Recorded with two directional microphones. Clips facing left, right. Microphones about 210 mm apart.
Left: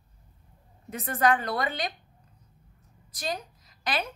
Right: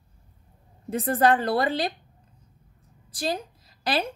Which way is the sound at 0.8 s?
30° right (ahead or behind).